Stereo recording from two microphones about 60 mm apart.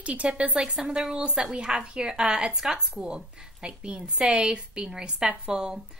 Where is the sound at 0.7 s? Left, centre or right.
Centre.